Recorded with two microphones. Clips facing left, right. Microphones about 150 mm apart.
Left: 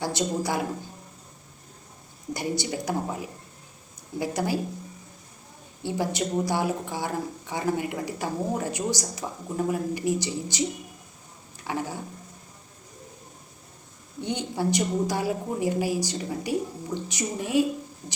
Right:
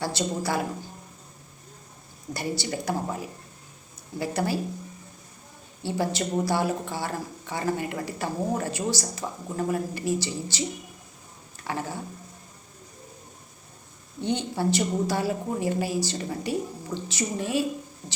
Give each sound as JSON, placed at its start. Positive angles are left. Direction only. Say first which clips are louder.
{"t": 0.0, "sound": "speech", "louder": "left 1 dB", "side_deg": 15}
{"t": 2.3, "sound": "speech", "louder": "left 1 dB", "side_deg": 15}
{"t": 5.8, "sound": "speech", "louder": "even", "side_deg": 15}
{"t": 11.6, "sound": "speech", "louder": "left 1 dB", "side_deg": 10}
{"t": 14.2, "sound": "speech", "louder": "right 1 dB", "side_deg": 15}